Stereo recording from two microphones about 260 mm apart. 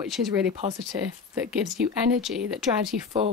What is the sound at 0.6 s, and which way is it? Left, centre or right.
Speech, right.